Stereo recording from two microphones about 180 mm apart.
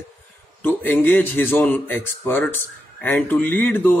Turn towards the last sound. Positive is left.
turn(degrees=10)  # may be behind; listen again after turning